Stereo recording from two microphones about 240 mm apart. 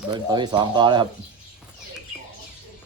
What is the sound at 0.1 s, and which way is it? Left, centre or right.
Speech, centre.